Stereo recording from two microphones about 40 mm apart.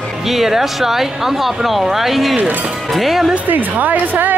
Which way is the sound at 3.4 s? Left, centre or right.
Right.